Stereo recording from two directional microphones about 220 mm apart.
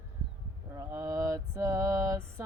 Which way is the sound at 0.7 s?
15° right (ahead or behind).